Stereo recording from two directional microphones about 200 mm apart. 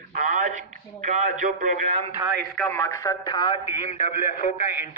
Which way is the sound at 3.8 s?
35° left (ahead or behind).